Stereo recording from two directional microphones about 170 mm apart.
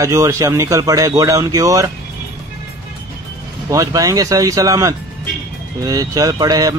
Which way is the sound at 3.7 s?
20° right (ahead or behind).